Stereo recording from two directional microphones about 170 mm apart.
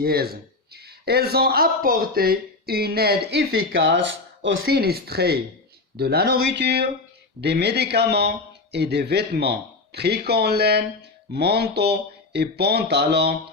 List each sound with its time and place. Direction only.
0.0 s a man's voice: 65° right (ahead or behind)